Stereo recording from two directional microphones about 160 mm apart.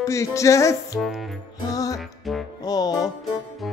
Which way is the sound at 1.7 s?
20° left (ahead or behind).